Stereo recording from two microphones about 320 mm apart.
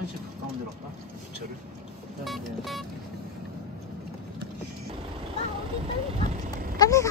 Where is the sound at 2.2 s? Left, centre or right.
Centre.